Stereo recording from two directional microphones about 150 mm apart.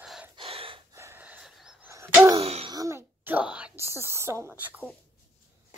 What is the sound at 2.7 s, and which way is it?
Speech, 20° right (ahead or behind).